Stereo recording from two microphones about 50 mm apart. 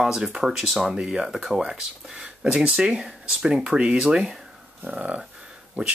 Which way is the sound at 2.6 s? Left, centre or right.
Centre.